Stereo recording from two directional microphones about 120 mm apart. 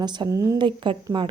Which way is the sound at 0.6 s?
40° right (ahead or behind).